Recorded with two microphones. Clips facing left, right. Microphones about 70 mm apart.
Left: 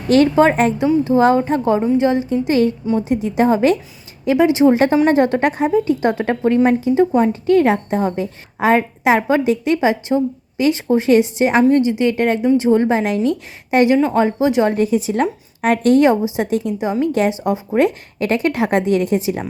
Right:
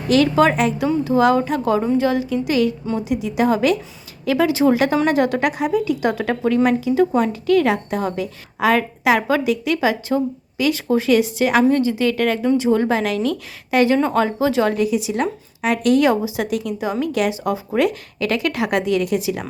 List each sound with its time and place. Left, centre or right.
0.1 s a woman's voice: left
13.9 s speech: centre
14.2 s a woman's voice: left
14.8 s a woman's voice: left